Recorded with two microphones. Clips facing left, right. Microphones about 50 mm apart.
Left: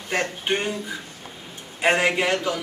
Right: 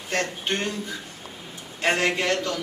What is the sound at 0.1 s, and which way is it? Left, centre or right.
Speech, centre.